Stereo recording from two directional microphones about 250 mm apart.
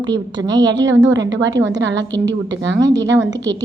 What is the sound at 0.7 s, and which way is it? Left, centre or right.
A woman's voice, right.